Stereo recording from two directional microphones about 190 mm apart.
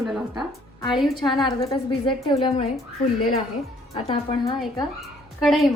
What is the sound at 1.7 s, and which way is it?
A woman's voice, 25° left (ahead or behind).